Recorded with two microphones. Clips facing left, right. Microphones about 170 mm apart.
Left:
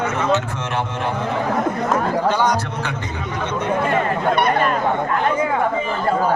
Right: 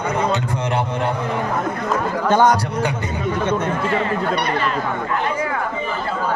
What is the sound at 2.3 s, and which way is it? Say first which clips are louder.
Speech: right 7 dB; 50° right (ahead or behind).